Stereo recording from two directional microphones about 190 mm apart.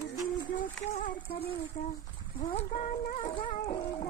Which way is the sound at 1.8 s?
40° left (ahead or behind).